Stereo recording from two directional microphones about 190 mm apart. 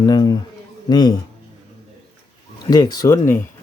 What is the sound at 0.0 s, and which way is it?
Speech, 20° left (ahead or behind).